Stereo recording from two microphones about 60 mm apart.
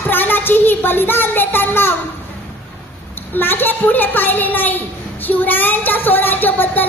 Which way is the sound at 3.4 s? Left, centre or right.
Left.